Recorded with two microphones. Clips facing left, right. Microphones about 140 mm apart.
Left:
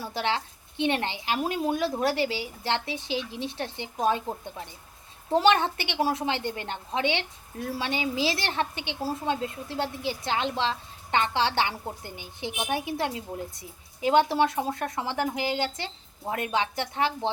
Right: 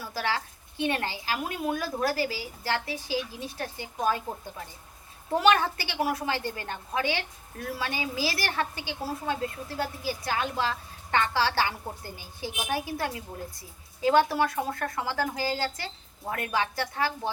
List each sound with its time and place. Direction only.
0.0 s speech: 25° left (ahead or behind)
5.3 s speech: 25° left (ahead or behind)